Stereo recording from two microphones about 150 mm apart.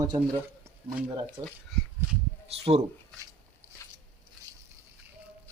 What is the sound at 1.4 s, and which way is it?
Speech, 25° right (ahead or behind).